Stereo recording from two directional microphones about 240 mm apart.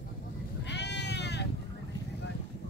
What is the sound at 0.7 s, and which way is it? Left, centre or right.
Sheep, left.